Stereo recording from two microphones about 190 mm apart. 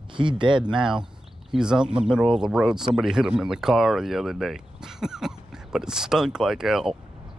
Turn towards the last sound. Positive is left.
turn(degrees=0)  # may be behind; listen again after turning